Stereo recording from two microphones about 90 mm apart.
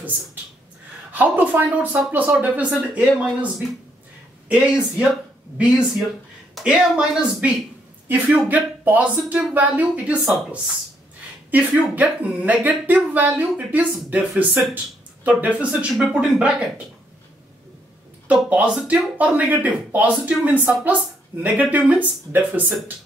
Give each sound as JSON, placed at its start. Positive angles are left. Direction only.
{"t": 1.1, "sound": "speech", "side_deg": -20}
{"t": 11.9, "sound": "speech", "side_deg": -15}
{"t": 18.3, "sound": "speech", "side_deg": -15}